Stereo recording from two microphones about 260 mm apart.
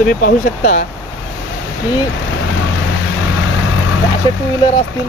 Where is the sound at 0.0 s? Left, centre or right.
Left.